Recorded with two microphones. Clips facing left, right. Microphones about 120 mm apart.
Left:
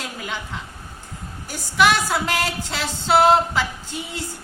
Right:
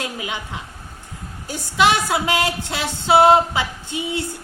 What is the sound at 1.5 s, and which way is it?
Speech, 20° right (ahead or behind).